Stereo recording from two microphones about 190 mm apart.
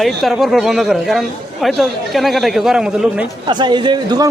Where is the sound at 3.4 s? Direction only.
25° right (ahead or behind).